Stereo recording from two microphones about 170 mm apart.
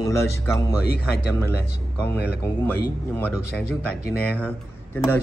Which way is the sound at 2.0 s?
10° left (ahead or behind).